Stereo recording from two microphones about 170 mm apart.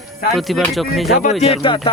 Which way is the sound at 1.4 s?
30° left (ahead or behind).